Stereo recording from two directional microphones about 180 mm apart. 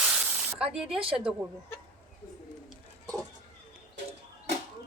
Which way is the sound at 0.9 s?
30° right (ahead or behind).